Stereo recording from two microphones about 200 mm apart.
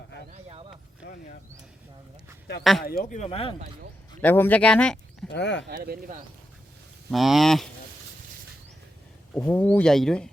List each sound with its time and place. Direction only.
1.0 s a sound: 45° left (ahead or behind)
2.8 s a man's voice: 45° left (ahead or behind)
3.2 s speech: 30° left (ahead or behind)
4.2 s speech: 10° left (ahead or behind)
5.3 s speech: 60° left (ahead or behind)
5.6 s speech: 50° right (ahead or behind)
7.1 s speech: centre (ahead or behind)
9.3 s speech: 10° left (ahead or behind)